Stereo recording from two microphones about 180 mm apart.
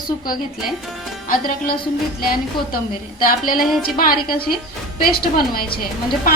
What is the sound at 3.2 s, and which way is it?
A woman's voice, 50° left (ahead or behind).